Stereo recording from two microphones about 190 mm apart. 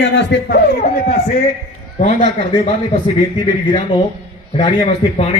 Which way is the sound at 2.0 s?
40° left (ahead or behind).